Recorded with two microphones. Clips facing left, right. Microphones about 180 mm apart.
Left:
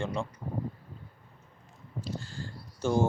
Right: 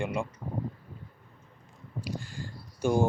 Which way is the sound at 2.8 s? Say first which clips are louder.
Right 1 dB; 15° right (ahead or behind).